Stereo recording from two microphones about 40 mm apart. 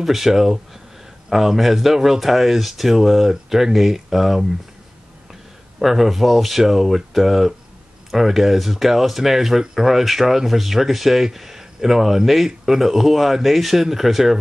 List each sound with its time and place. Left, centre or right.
0.0 s speech: centre